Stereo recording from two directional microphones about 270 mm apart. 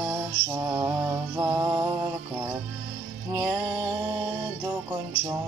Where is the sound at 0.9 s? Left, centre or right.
Centre.